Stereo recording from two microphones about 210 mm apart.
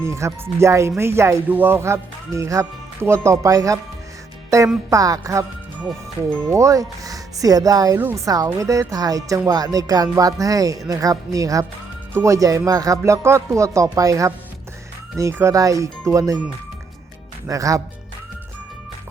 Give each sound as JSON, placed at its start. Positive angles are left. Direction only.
{"t": 0.0, "sound": "speech", "side_deg": -15}
{"t": 4.9, "sound": "speech", "side_deg": -15}